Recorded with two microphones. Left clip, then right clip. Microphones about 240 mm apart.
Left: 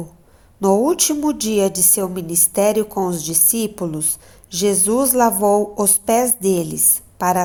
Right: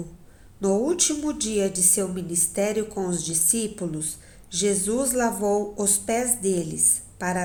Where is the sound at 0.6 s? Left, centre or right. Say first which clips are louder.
Left 7 dB; left.